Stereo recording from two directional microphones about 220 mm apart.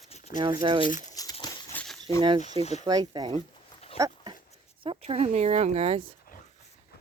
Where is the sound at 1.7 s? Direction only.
5° left (ahead or behind).